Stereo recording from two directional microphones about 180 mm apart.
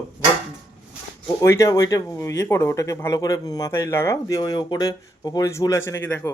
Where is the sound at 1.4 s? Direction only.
15° left (ahead or behind).